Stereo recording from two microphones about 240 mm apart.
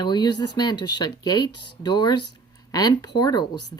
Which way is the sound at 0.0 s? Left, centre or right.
Centre.